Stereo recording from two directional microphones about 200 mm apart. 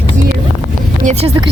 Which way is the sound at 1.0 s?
30° right (ahead or behind).